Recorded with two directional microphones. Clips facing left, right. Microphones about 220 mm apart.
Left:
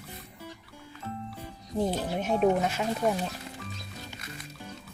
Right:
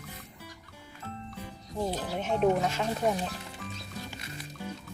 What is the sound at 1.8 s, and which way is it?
Speech, 10° left (ahead or behind).